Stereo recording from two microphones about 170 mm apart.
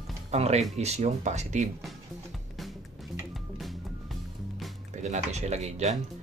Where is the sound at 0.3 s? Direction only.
40° right (ahead or behind).